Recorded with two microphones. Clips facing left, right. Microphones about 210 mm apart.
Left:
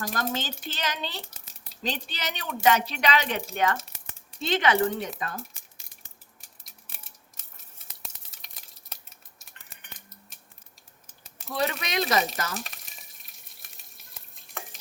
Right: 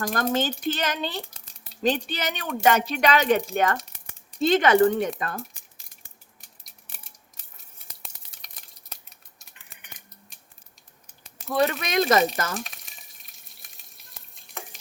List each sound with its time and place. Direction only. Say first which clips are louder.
0.0 s speech: right 6 dB; 50° right (ahead or behind)
1.2 s a sound: right 3 dB; centre (ahead or behind)
1.8 s speech: right 8 dB; 50° right (ahead or behind)
8.0 s a sound: left 1 dB; centre (ahead or behind)
11.4 s speech: right 5 dB; 50° right (ahead or behind)
12.5 s frying: right 3 dB; centre (ahead or behind)